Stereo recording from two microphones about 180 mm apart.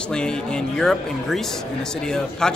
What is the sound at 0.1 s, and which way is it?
A man's voice, 5° left (ahead or behind).